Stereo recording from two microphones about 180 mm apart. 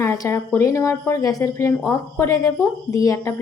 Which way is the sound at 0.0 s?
15° left (ahead or behind).